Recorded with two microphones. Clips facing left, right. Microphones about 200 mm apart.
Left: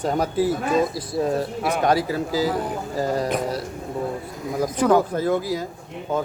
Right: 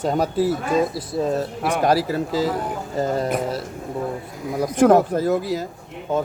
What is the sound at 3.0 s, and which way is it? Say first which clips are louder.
Speech: right 1 dB; 25° right (ahead or behind).